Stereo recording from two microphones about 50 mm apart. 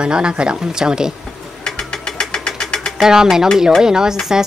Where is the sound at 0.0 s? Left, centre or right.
Centre.